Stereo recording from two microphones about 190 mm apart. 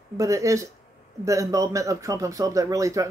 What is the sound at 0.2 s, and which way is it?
Speech, 15° right (ahead or behind).